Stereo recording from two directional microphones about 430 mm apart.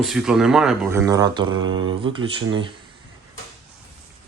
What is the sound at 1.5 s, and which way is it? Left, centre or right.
Mantra, right.